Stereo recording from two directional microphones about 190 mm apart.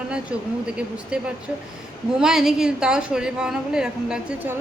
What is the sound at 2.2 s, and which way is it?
A woman's voice, centre (ahead or behind).